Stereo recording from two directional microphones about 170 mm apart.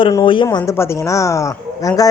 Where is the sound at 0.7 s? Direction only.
15° left (ahead or behind).